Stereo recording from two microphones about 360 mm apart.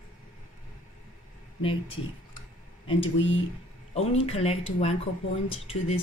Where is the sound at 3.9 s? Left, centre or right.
Centre.